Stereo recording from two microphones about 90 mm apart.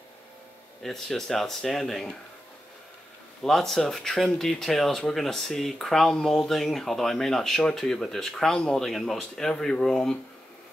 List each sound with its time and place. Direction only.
0.8 s speech: 5° left (ahead or behind)
3.4 s speech: 5° left (ahead or behind)